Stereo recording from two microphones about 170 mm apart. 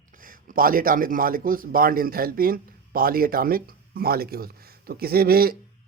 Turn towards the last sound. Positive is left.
turn(degrees=-60)  # may be behind; listen again after turning